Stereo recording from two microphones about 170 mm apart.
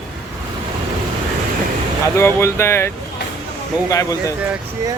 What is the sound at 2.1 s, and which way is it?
Speech, 15° left (ahead or behind).